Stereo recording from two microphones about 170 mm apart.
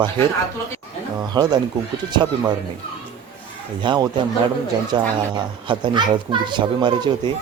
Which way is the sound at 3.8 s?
25° right (ahead or behind).